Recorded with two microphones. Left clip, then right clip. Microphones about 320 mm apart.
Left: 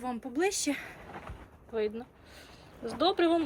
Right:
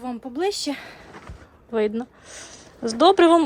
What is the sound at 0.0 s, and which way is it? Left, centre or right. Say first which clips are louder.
A woman's voice: right 5 dB; centre.